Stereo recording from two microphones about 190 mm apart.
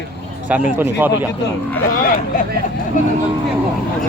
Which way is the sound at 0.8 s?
10° right (ahead or behind).